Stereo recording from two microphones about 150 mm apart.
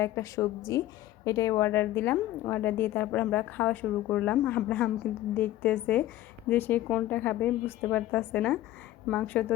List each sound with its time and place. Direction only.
0.0 s a woman's voice: 20° left (ahead or behind)